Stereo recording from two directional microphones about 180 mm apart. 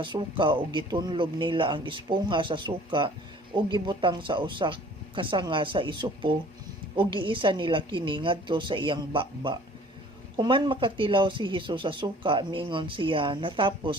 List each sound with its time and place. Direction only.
0.0 s speech: 25° right (ahead or behind)